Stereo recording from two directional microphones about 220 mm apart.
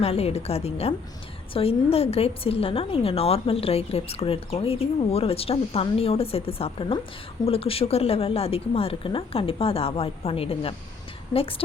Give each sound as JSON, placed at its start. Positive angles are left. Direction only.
{"t": 0.0, "sound": "a woman's voice", "side_deg": 25}